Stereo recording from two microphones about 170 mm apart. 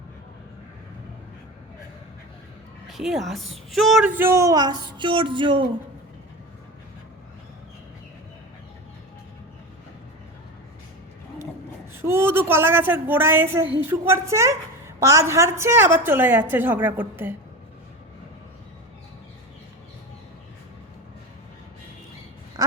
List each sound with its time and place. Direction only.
2.8 s a woman's voice: centre (ahead or behind)
4.2 s child singing: 15° right (ahead or behind)
12.0 s a woman's voice: 15° right (ahead or behind)